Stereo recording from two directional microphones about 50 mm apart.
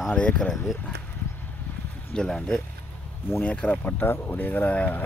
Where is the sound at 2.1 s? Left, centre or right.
Centre.